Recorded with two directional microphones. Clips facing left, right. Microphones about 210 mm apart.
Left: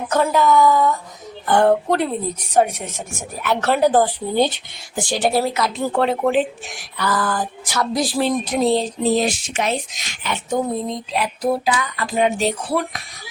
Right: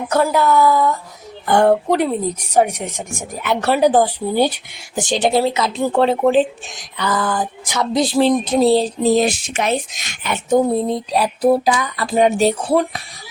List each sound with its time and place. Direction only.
0.1 s speech: 10° right (ahead or behind); by 9.1 s 35° right (ahead or behind)
9.1 s speech: 55° right (ahead or behind)
10.8 s speech: 35° right (ahead or behind)